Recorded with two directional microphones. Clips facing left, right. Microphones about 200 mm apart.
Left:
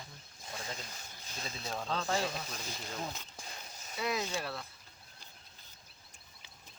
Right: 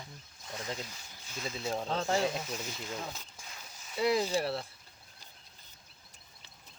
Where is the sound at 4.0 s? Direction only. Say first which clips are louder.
Right 7 dB; 30° right (ahead or behind).